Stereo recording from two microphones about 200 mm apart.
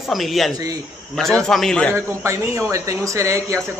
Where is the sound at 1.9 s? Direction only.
15° right (ahead or behind).